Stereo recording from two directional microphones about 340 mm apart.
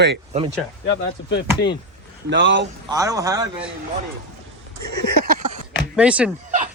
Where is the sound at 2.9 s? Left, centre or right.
Centre.